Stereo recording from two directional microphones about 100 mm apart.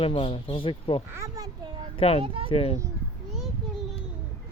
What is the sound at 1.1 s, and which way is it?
Speech, 30° right (ahead or behind).